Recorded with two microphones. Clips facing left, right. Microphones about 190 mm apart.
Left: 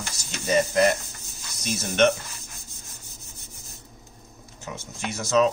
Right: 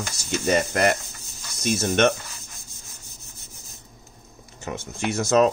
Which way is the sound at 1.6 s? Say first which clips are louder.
Right 1 dB; 55° right (ahead or behind).